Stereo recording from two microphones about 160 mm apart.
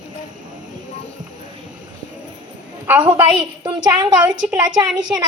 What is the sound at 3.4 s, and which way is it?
A woman's voice, 30° right (ahead or behind).